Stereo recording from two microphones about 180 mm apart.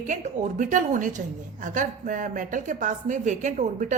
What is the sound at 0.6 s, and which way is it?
A woman's voice, 45° right (ahead or behind).